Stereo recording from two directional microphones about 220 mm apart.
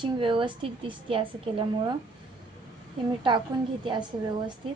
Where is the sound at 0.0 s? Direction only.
25° right (ahead or behind).